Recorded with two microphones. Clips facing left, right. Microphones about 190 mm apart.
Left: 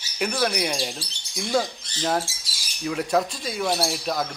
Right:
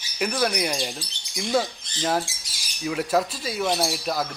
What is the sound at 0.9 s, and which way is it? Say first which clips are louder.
Speech: even; 15° right (ahead or behind).